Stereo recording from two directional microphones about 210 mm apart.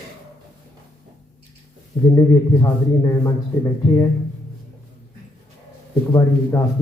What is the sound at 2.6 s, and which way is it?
Speech, 15° left (ahead or behind).